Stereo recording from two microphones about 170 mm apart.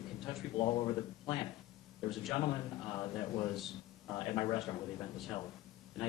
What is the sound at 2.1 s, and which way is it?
Speech, centre (ahead or behind).